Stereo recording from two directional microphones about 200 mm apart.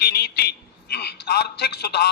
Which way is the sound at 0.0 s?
55° left (ahead or behind).